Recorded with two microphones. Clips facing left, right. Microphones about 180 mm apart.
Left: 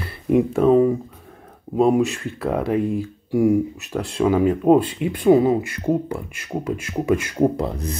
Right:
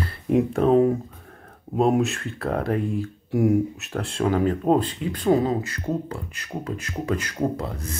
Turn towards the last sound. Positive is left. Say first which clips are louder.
# left 6 dB
turn(degrees=20)  # may be behind; listen again after turning